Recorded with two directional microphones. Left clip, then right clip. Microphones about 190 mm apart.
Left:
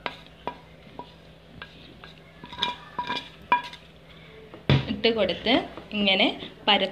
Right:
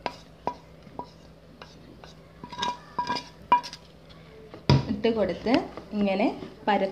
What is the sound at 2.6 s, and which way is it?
Dishes, 20° right (ahead or behind).